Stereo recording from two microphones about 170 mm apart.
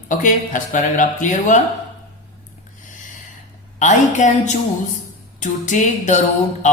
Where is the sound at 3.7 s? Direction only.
45° left (ahead or behind).